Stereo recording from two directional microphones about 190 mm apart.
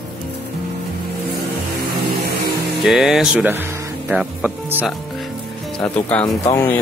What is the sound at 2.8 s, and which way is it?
Speech, centre (ahead or behind).